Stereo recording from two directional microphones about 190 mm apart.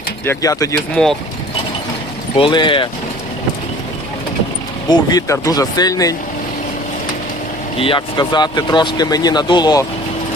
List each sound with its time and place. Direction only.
0.3 s speech: 15° left (ahead or behind)
1.0 s speech: 5° left (ahead or behind)
2.3 s speech: 25° left (ahead or behind)
4.9 s speech: 20° left (ahead or behind)
7.8 s speech: 25° left (ahead or behind)